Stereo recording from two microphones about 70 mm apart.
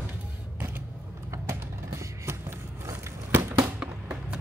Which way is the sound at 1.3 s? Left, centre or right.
Right.